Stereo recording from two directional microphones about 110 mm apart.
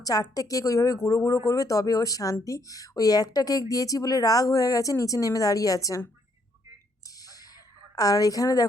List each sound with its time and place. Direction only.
0.0 s speech: 35° left (ahead or behind)
7.2 s a sound: 35° left (ahead or behind)
7.9 s speech: 35° left (ahead or behind)